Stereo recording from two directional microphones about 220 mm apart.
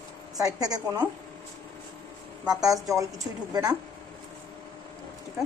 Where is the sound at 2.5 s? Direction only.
15° right (ahead or behind).